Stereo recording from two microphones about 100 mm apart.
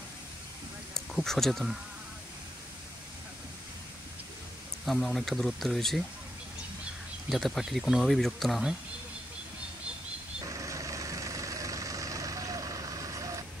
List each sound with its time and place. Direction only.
0.9 s speech: 5° left (ahead or behind)
4.8 s speech: centre (ahead or behind)
7.2 s speech: centre (ahead or behind)
10.4 s vehicle: 35° right (ahead or behind)